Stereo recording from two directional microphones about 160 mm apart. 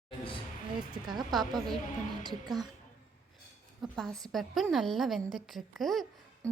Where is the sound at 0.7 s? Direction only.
30° right (ahead or behind).